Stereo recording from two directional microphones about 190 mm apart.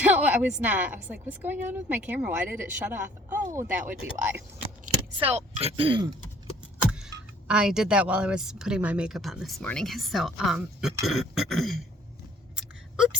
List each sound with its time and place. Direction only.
0.0 s a woman's voice: 10° right (ahead or behind)
5.1 s speech: 30° right (ahead or behind)
7.4 s a woman's voice: 5° right (ahead or behind)